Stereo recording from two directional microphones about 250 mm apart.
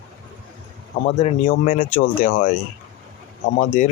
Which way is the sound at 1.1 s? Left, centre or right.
Left.